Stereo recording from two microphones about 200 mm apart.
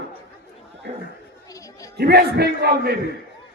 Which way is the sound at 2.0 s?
55° right (ahead or behind).